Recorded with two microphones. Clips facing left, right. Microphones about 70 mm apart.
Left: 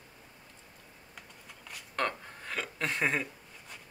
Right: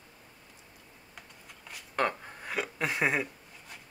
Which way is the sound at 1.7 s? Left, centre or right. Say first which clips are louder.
Right 3 dB; centre.